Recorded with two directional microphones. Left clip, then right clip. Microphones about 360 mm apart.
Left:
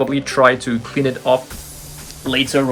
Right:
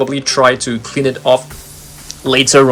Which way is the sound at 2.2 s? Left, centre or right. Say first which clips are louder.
Right 8 dB; centre.